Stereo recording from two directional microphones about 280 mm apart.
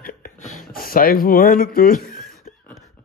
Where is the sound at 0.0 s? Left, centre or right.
Left.